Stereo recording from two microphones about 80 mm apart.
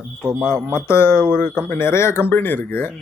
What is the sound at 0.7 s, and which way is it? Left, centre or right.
Speech, left.